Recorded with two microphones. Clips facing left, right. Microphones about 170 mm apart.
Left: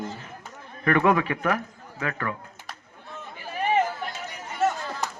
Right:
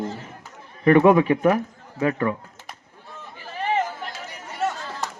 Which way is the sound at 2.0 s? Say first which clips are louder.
Right 8 dB; 20° right (ahead or behind).